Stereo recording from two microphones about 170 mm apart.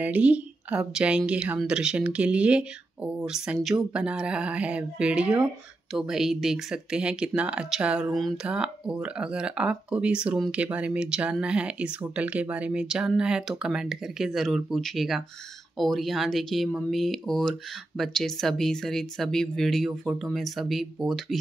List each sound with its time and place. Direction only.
0.0 s speech: 10° right (ahead or behind)